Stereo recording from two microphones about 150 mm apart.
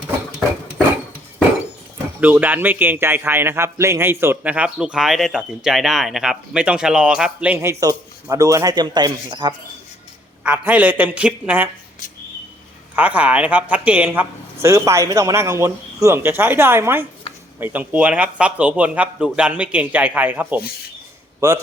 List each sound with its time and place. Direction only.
2.2 s a man's voice: 10° right (ahead or behind); by 9.6 s 30° right (ahead or behind)
10.4 s a man's voice: 10° right (ahead or behind)
13.0 s a man's voice: 10° right (ahead or behind)